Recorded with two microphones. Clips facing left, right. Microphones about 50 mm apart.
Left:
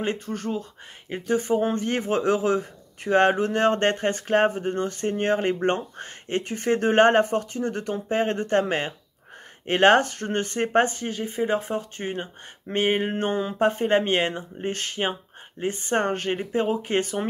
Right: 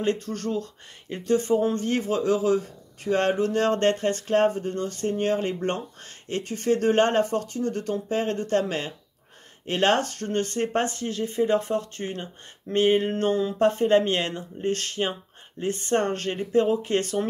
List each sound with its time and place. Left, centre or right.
0.0 s speech: left